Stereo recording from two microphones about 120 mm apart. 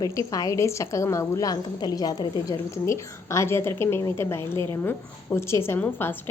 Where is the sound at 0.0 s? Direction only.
30° left (ahead or behind).